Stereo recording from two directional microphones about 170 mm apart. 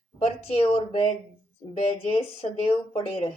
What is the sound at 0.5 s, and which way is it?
Speech, 35° left (ahead or behind).